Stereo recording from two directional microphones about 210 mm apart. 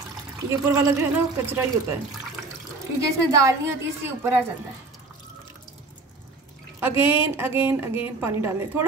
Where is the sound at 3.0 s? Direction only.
15° right (ahead or behind).